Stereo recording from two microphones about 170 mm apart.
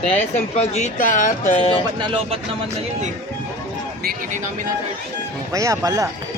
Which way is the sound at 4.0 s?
60° right (ahead or behind).